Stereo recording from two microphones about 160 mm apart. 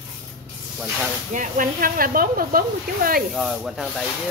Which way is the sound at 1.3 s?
55° right (ahead or behind).